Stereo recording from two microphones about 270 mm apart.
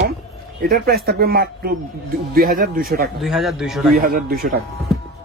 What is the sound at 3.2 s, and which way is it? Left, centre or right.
Speech, centre.